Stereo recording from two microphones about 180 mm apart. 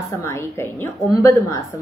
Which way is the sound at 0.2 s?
15° left (ahead or behind).